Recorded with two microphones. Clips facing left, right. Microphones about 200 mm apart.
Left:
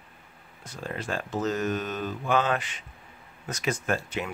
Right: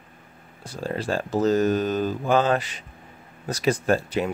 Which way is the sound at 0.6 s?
30° right (ahead or behind).